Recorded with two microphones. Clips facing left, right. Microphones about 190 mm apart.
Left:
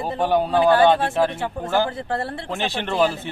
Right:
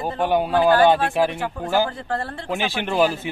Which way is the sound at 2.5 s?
5° right (ahead or behind).